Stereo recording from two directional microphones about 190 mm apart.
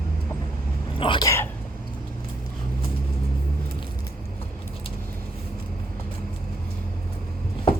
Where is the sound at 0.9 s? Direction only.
25° left (ahead or behind).